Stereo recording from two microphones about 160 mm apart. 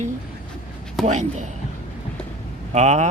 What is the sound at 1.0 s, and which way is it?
Speech, 50° right (ahead or behind).